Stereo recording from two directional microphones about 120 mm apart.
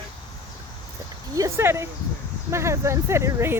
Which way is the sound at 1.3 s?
25° right (ahead or behind).